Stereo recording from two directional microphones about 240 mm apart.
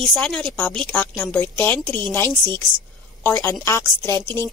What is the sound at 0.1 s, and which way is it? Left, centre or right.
A woman's voice, centre.